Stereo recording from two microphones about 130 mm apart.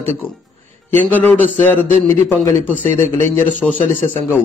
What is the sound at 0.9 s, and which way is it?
A man's voice, 15° left (ahead or behind).